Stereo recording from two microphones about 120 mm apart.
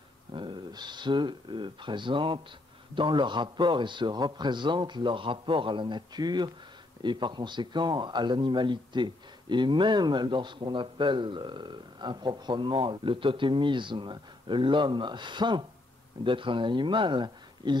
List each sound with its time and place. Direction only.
0.3 s a man's voice: 40° right (ahead or behind)